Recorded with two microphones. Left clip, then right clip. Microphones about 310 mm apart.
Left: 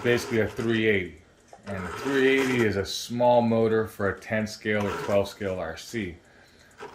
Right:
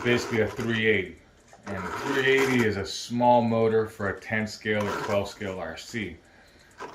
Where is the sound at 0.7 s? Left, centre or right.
Left.